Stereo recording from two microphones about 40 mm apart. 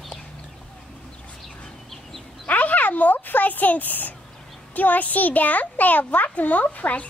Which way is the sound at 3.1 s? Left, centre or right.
Left.